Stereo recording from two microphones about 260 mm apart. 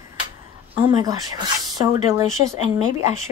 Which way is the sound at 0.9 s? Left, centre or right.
Centre.